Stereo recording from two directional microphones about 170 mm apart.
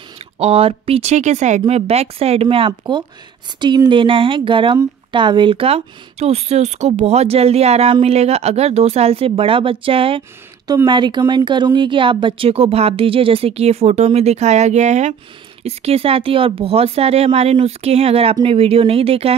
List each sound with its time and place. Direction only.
0.4 s speech: 35° right (ahead or behind)